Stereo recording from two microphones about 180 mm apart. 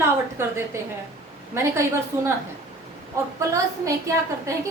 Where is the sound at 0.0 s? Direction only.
15° right (ahead or behind).